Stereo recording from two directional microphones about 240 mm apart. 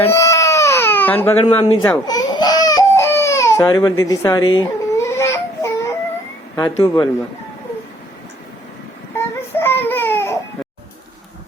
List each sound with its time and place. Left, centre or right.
0.0 s crying: centre
1.5 s speech: left
1.8 s baby cry: centre
6.6 s speech: centre
9.1 s baby cry: centre